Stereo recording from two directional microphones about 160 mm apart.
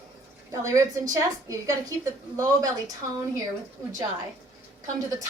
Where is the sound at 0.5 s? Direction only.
20° right (ahead or behind).